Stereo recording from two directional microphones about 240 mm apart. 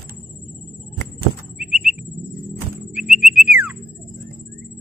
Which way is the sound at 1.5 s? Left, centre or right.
Centre.